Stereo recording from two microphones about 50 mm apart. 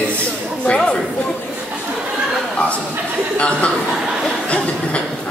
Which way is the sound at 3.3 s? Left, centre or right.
Left.